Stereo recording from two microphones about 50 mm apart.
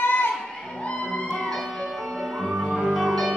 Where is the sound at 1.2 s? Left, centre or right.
Centre.